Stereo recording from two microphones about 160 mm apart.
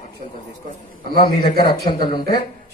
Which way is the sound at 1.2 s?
80° left.